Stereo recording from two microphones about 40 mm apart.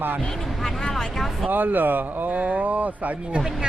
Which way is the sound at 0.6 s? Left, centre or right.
Centre.